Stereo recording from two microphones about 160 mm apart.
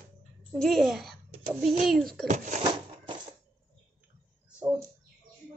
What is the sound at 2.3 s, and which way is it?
Speech, 50° right (ahead or behind).